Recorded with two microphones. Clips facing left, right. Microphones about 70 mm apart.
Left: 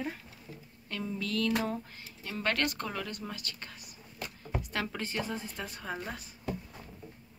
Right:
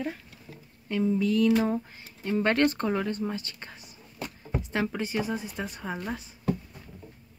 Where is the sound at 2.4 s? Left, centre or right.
Right.